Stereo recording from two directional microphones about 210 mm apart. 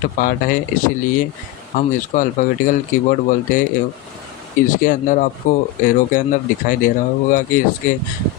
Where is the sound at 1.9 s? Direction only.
40° left (ahead or behind).